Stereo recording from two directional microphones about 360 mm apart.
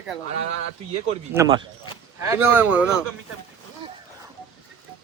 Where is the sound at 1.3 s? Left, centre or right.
Centre.